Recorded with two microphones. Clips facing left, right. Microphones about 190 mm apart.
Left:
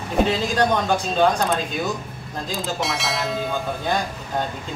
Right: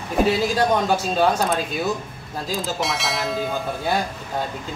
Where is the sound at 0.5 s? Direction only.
5° right (ahead or behind).